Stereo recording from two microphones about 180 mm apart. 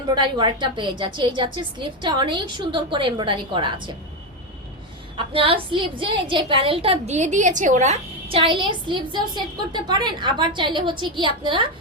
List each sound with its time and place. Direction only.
0.1 s a woman's voice: 25° right (ahead or behind)
5.1 s a woman's voice: 30° right (ahead or behind)